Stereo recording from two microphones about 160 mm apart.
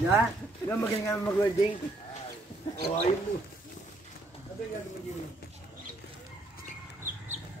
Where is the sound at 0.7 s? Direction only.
15° left (ahead or behind).